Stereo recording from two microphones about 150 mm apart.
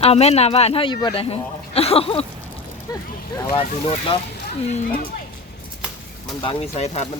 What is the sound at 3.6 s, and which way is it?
Speech, 40° left (ahead or behind).